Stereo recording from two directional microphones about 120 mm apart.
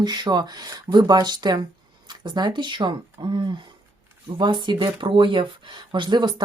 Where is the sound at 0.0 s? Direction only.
35° right (ahead or behind).